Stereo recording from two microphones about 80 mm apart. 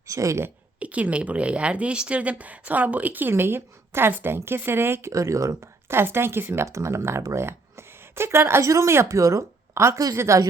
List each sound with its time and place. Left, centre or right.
0.1 s a woman's voice: right
0.8 s a woman's voice: centre; by 10.4 s right